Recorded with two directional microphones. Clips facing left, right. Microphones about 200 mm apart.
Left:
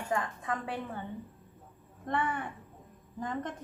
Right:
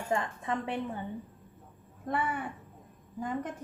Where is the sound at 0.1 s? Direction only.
25° right (ahead or behind).